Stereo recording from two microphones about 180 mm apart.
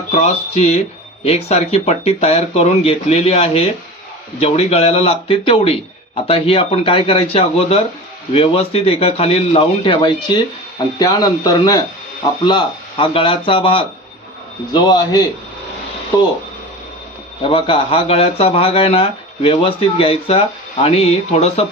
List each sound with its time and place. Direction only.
0.1 s a man's voice: 40° left (ahead or behind)
17.5 s speech: 30° left (ahead or behind)